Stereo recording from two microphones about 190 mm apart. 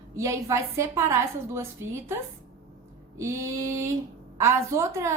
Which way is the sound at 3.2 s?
15° right (ahead or behind).